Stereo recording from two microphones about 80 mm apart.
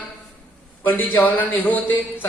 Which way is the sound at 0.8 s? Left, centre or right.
Left.